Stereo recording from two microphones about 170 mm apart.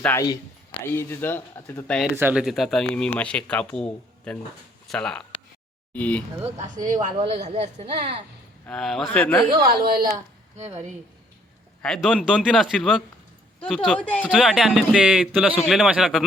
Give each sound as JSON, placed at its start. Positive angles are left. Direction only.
{"t": 0.0, "sound": "speech", "side_deg": 15}
{"t": 2.1, "sound": "speech", "side_deg": -10}
{"t": 6.6, "sound": "a woman's voice", "side_deg": -50}
{"t": 7.4, "sound": "speech", "side_deg": -40}
{"t": 8.6, "sound": "speech", "side_deg": 0}
{"t": 9.6, "sound": "a woman's voice", "side_deg": -65}
{"t": 10.6, "sound": "speech", "side_deg": -40}
{"t": 11.8, "sound": "speech", "side_deg": 5}
{"t": 14.3, "sound": "speech", "side_deg": -5}